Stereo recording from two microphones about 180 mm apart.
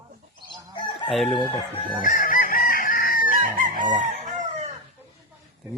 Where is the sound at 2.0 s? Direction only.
45° left (ahead or behind).